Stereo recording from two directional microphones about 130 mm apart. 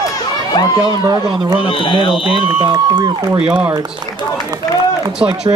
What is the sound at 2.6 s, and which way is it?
Speech, 35° right (ahead or behind).